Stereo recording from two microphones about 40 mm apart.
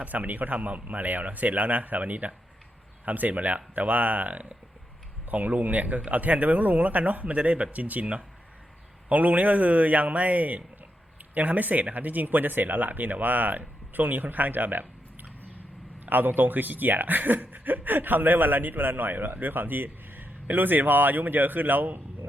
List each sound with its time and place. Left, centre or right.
0.0 s speech: right